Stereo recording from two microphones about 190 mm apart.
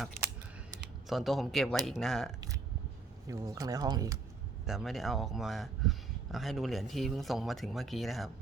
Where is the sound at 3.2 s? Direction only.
15° right (ahead or behind).